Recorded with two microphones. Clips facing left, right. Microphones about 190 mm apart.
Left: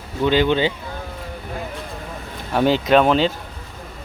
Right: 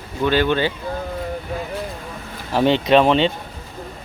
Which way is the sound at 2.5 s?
Centre (ahead or behind).